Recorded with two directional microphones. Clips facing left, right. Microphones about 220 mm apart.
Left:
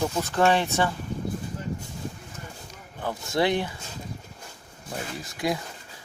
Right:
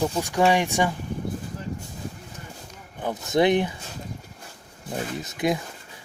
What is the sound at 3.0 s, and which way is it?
Speech, 20° right (ahead or behind).